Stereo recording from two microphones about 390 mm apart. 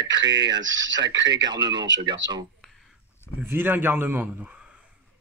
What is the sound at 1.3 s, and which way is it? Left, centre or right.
Speech, centre.